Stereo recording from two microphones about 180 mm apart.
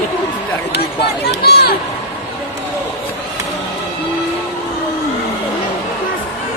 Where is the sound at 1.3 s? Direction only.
60° left (ahead or behind).